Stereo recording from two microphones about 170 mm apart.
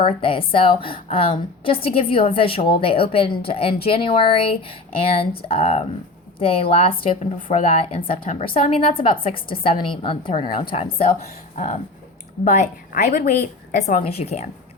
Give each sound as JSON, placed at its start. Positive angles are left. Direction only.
{"t": 0.0, "sound": "a woman's voice", "side_deg": 30}
{"t": 11.5, "sound": "a woman's voice", "side_deg": 45}